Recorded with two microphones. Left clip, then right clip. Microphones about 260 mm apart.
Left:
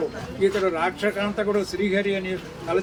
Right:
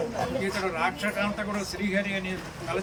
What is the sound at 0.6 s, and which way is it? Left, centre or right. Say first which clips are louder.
A man's voice: left 5 dB; left.